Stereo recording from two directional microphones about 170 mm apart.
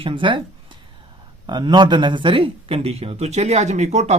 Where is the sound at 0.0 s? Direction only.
30° right (ahead or behind).